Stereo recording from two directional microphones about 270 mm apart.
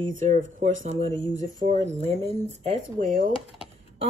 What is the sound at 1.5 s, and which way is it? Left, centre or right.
Speech, right.